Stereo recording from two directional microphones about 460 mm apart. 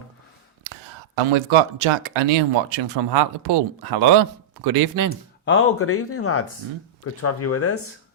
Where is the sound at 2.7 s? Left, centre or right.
Right.